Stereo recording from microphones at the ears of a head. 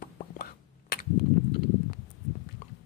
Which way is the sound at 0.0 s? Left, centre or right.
Left.